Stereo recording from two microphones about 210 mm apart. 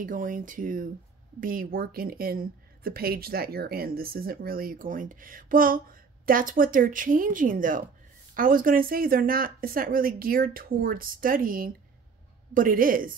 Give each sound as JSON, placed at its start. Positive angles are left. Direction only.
{"t": 0.0, "sound": "a woman's voice", "side_deg": -40}